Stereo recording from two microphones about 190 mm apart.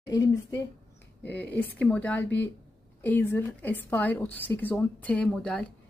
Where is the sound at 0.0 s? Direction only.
20° left (ahead or behind).